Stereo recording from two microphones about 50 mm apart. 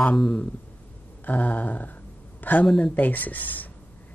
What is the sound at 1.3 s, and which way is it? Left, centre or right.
Speech, left.